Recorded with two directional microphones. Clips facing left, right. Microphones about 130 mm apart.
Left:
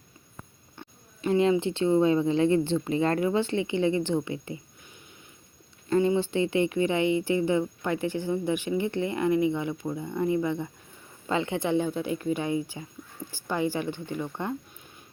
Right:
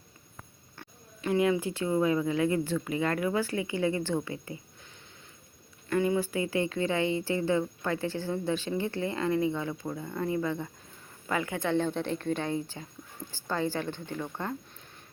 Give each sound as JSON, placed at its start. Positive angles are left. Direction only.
{"t": 0.8, "sound": "a woman's voice", "side_deg": 25}
{"t": 5.9, "sound": "a woman's voice", "side_deg": 25}